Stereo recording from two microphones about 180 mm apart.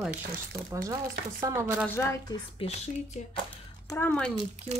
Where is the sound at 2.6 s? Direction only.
30° left (ahead or behind).